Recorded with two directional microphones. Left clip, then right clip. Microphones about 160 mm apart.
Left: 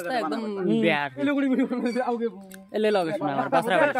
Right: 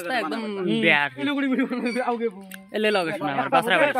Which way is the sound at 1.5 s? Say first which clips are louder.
Even; centre (ahead or behind).